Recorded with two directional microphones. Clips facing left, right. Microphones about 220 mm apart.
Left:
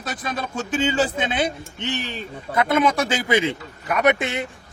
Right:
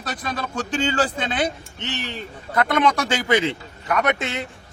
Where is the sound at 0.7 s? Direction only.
5° left (ahead or behind).